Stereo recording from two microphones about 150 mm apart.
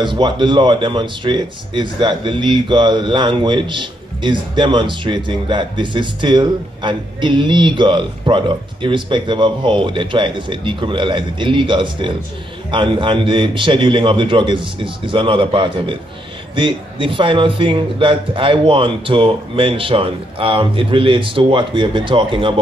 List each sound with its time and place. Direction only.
0.0 s speech: 30° right (ahead or behind)